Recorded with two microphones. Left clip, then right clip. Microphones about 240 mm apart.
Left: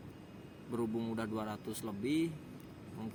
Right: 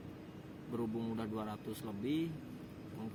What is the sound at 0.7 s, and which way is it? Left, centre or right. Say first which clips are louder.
Speech: left 3 dB; left.